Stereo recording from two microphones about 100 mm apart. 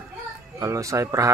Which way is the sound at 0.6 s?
30° right (ahead or behind).